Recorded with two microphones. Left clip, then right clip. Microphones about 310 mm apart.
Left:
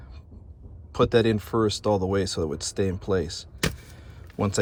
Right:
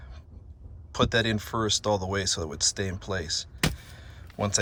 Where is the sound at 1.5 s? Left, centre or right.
Right.